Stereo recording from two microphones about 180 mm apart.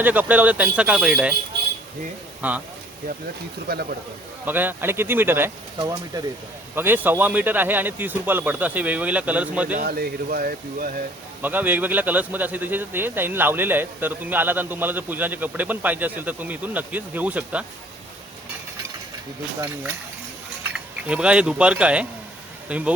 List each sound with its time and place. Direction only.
0.0 s speech: 10° right (ahead or behind)
2.4 s speech: 10° right (ahead or behind)
3.7 s speech: 60° right (ahead or behind)
4.4 s speech: 10° right (ahead or behind)
9.7 s speech: 55° right (ahead or behind)
11.4 s speech: 10° right (ahead or behind)
20.7 s speech: 5° right (ahead or behind)